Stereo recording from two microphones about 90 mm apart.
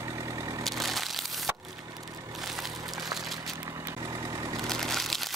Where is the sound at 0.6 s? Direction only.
Centre (ahead or behind).